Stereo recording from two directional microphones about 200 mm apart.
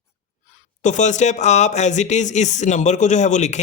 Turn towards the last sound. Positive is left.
turn(degrees=35)  # may be behind; listen again after turning